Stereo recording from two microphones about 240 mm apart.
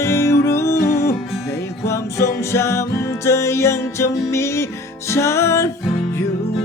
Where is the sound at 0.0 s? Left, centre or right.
Centre.